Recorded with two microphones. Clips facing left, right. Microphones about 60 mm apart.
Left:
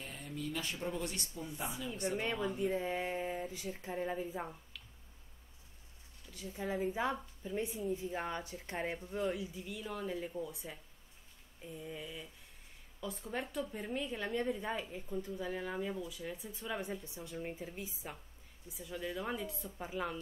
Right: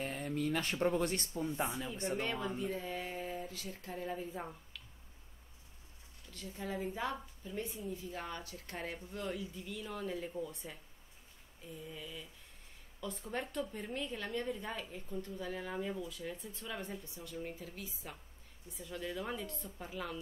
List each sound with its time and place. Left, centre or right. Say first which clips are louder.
0.0 s speech: right 6 dB; right
2.1 s a woman's voice: left 1 dB; centre
2.6 s speech: left 4 dB; left; by 4.8 s centre
6.3 s a woman's voice: left 3 dB; centre
11.8 s a sound: left 2 dB; centre
13.0 s a woman's voice: even; centre